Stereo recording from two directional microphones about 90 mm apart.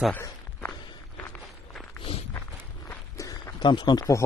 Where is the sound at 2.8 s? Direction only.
35° left (ahead or behind).